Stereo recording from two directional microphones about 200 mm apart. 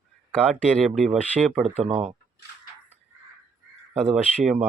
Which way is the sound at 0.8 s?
Centre (ahead or behind).